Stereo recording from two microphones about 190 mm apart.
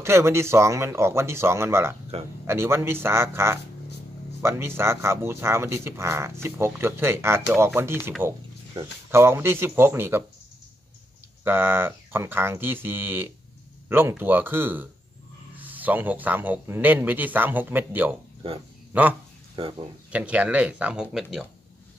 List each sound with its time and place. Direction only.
0.0 s speech: 15° right (ahead or behind)
9.1 s speech: 10° right (ahead or behind)
11.4 s speech: 10° right (ahead or behind)